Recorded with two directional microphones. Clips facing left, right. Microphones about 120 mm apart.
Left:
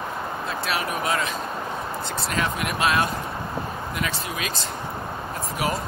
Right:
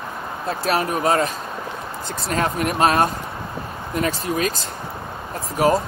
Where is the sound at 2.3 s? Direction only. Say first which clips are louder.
Right 6 dB; 40° right (ahead or behind).